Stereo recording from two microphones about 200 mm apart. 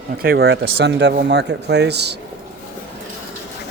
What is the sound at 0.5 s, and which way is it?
Speech, 60° right (ahead or behind).